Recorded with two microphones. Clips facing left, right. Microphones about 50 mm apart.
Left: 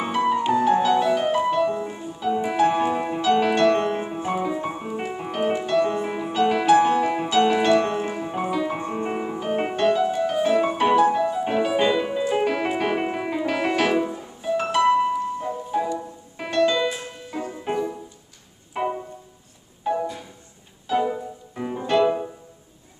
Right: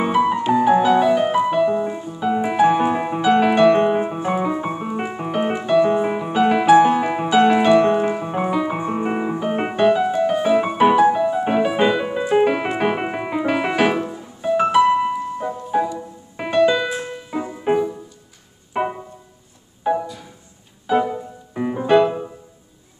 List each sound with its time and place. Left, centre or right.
0.0 s music: centre
8.0 s piano: right
10.4 s music: centre
17.3 s music: right